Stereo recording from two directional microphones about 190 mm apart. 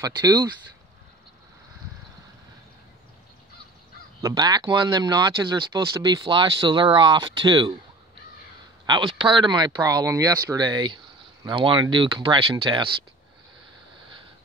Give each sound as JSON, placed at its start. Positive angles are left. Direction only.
{"t": 0.0, "sound": "speech", "side_deg": -20}
{"t": 4.2, "sound": "speech", "side_deg": -20}
{"t": 8.8, "sound": "speech", "side_deg": -25}